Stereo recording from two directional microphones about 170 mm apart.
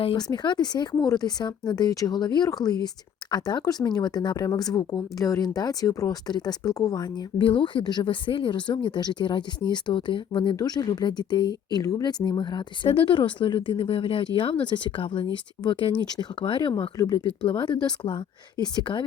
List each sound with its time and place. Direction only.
0.0 s speech: 35° left (ahead or behind)